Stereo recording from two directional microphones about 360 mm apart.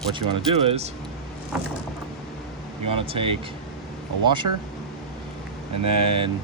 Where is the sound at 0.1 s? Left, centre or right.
Centre.